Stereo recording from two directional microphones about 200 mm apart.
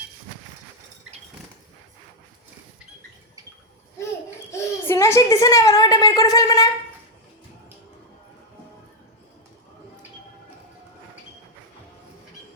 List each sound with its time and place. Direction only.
4.5 s a woman's voice: 15° left (ahead or behind)